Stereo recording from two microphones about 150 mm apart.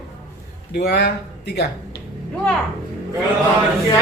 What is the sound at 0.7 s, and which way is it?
Speech, 90° left.